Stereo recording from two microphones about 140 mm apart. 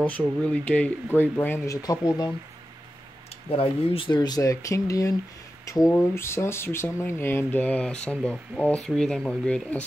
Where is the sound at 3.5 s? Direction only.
40° left (ahead or behind).